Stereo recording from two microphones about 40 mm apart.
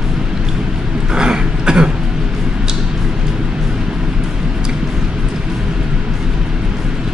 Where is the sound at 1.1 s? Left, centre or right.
Centre.